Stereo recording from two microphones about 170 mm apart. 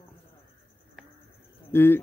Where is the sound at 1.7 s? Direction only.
15° left (ahead or behind).